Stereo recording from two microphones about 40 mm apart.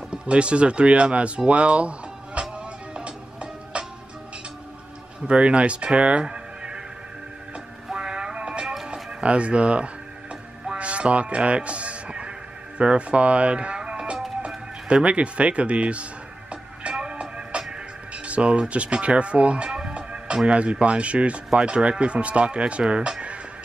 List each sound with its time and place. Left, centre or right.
0.1 s speech: right
2.9 s music: right
5.2 s speech: right
7.9 s music: right
9.2 s speech: right
10.7 s music: right
18.1 s speech: right